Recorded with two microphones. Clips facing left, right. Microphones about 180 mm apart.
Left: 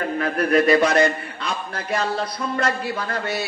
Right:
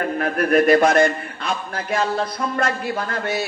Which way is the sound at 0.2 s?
50° right (ahead or behind).